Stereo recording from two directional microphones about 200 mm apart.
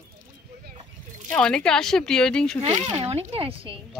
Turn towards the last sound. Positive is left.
turn(degrees=-25)  # may be behind; listen again after turning